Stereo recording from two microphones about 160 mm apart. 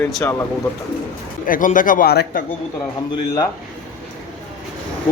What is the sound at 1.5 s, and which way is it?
Speech, 55° left (ahead or behind).